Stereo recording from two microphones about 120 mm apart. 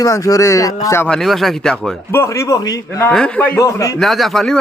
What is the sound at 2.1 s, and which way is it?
Speech, 25° left (ahead or behind).